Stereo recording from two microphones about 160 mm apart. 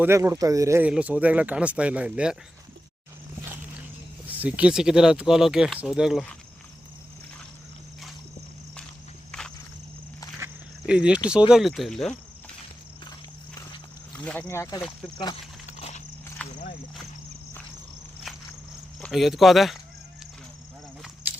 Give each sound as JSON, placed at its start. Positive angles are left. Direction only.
{"t": 0.0, "sound": "speech", "side_deg": -20}
{"t": 4.3, "sound": "speech", "side_deg": -10}
{"t": 10.8, "sound": "speech", "side_deg": -5}
{"t": 14.1, "sound": "speech", "side_deg": 10}
{"t": 15.6, "sound": "horse", "side_deg": 45}
{"t": 18.9, "sound": "speech", "side_deg": 0}